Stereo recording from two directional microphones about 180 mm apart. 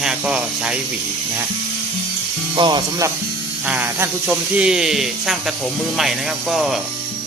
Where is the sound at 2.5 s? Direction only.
25° right (ahead or behind).